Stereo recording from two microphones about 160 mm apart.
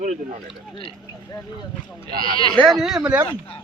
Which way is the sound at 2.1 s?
65° right (ahead or behind).